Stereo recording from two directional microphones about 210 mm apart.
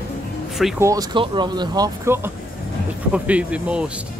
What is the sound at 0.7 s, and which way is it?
Speech, 15° right (ahead or behind).